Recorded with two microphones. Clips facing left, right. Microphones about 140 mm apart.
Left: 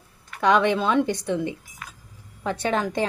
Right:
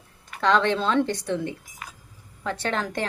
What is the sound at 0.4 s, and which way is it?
Speech, 15° left (ahead or behind).